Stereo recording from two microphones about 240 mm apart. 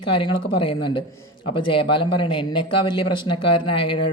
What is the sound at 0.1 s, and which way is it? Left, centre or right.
A man's voice, centre.